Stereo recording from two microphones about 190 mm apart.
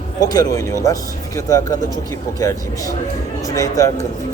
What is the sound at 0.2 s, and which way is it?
Speech, 20° left (ahead or behind).